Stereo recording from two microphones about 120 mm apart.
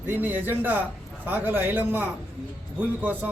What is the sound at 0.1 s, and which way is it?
A man's voice, 15° right (ahead or behind).